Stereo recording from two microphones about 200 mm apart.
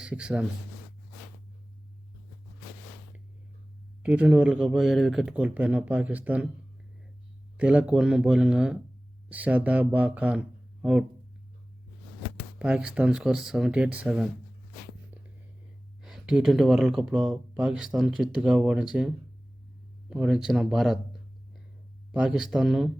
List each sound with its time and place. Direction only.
0.0 s speech: 5° right (ahead or behind)
4.0 s speech: 5° right (ahead or behind)
7.5 s speech: 5° right (ahead or behind)
12.5 s speech: 5° right (ahead or behind)
16.0 s speech: centre (ahead or behind)
20.1 s speech: 5° right (ahead or behind)